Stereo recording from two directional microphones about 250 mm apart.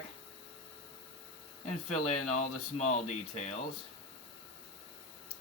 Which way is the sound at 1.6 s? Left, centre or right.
Left.